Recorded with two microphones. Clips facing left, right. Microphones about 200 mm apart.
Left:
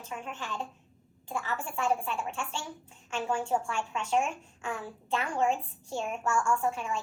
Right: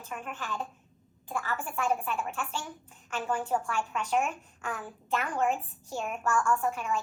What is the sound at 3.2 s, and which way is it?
A woman's voice, 25° left (ahead or behind).